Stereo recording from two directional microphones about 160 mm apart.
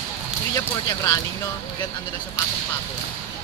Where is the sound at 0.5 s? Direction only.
20° left (ahead or behind).